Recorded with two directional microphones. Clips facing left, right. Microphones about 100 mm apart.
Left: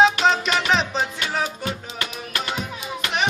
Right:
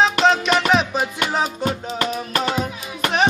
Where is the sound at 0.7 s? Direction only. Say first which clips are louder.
Right 3 dB; 5° right (ahead or behind).